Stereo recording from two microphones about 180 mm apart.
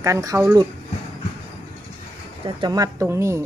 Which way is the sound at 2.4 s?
25° right (ahead or behind).